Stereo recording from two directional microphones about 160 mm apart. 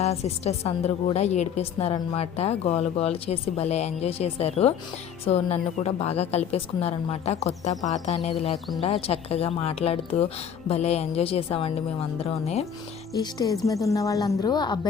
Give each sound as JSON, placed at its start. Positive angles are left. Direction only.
{"t": 0.0, "sound": "a woman's voice", "side_deg": 40}
{"t": 7.9, "sound": "music", "side_deg": 45}
{"t": 8.8, "sound": "a woman's voice", "side_deg": 40}
{"t": 13.1, "sound": "a woman's voice", "side_deg": 20}